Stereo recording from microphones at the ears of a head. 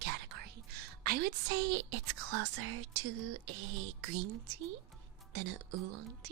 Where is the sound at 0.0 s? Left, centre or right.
Right.